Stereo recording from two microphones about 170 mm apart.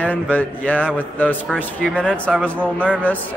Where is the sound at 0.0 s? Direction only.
10° left (ahead or behind).